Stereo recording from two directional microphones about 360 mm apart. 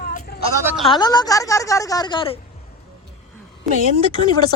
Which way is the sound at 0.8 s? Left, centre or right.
Centre.